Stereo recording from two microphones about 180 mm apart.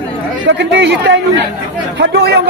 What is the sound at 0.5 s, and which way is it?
A man's voice, 75° right (ahead or behind).